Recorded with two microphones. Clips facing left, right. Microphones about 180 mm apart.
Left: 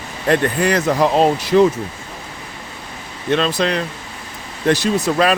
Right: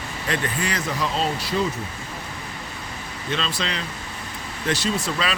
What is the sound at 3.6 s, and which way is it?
Speech, 55° left (ahead or behind).